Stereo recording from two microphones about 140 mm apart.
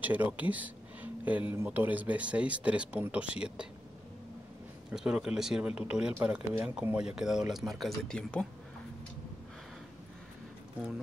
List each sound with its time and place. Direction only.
0.0 s speech: 10° right (ahead or behind)
4.9 s speech: 5° right (ahead or behind)